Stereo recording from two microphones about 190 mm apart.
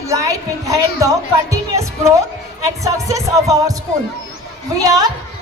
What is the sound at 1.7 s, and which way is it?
Music, 15° right (ahead or behind).